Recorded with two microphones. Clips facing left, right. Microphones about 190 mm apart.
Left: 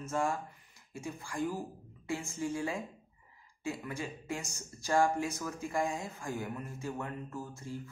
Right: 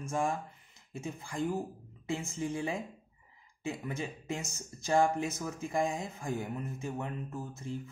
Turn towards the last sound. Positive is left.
turn(degrees=-20)  # may be behind; listen again after turning